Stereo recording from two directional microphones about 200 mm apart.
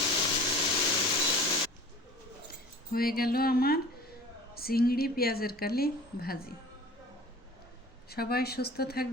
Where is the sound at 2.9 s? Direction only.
50° left (ahead or behind).